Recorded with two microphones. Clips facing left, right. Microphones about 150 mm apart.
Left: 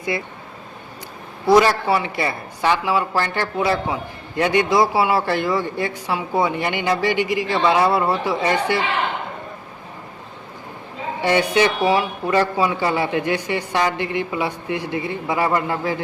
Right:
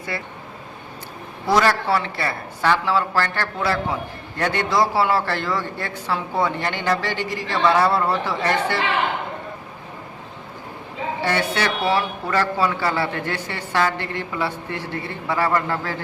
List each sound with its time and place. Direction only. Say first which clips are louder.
0.1 s speech: left 4 dB; 15° left (ahead or behind)
1.5 s speech: left 4 dB; 15° left (ahead or behind)
11.2 s speech: left 6 dB; 15° left (ahead or behind)